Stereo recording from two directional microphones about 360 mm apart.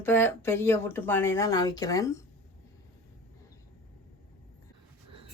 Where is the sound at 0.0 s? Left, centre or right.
Centre.